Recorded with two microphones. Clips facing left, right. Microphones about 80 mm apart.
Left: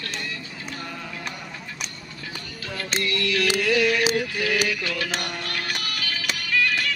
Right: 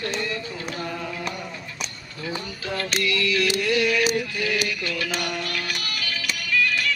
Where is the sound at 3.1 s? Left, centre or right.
Left.